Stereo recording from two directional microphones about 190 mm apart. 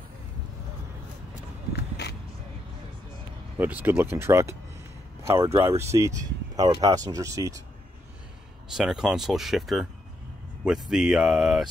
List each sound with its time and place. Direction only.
1.8 s a sound: 60° left (ahead or behind)
3.5 s speech: 10° right (ahead or behind)
8.7 s speech: centre (ahead or behind)